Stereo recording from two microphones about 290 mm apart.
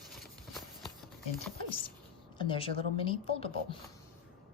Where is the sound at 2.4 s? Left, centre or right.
Centre.